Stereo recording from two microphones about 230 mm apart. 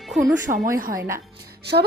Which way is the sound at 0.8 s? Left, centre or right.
Right.